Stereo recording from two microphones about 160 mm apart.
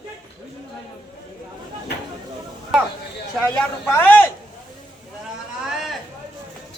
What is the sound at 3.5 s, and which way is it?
Speech, 10° left (ahead or behind).